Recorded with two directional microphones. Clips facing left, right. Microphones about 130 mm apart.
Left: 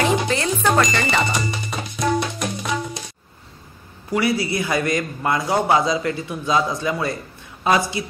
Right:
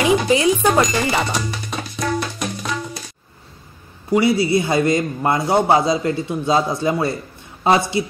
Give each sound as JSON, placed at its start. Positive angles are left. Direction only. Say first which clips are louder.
{"t": 0.0, "sound": "cash register", "louder": "right 5 dB", "side_deg": -15}
{"t": 0.7, "sound": "speech", "louder": "right 2 dB", "side_deg": 0}
{"t": 1.8, "sound": "music", "louder": "left 2 dB", "side_deg": 20}
{"t": 4.1, "sound": "a man's voice", "louder": "right 5 dB", "side_deg": -25}